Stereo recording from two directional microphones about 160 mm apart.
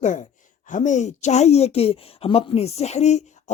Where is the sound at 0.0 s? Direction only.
50° left (ahead or behind).